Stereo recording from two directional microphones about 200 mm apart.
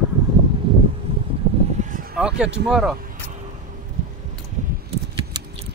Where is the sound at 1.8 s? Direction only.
45° right (ahead or behind).